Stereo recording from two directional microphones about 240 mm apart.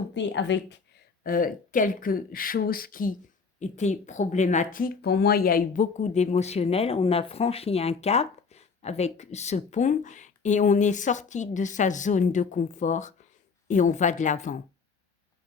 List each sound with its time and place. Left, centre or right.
0.1 s a woman's voice: left
1.2 s speech: left